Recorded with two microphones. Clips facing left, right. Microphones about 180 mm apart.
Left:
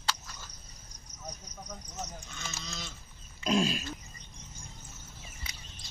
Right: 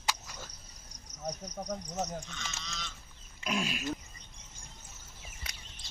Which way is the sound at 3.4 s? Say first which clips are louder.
Left 6 dB; 30° left (ahead or behind).